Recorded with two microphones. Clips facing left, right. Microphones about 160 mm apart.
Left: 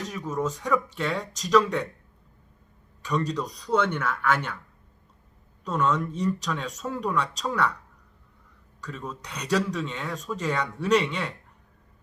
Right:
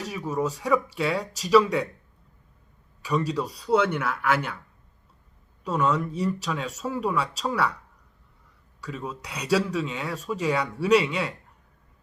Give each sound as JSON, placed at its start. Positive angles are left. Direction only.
{"t": 0.0, "sound": "speech", "side_deg": -10}
{"t": 3.0, "sound": "speech", "side_deg": -10}
{"t": 5.6, "sound": "speech", "side_deg": -10}
{"t": 8.8, "sound": "speech", "side_deg": -10}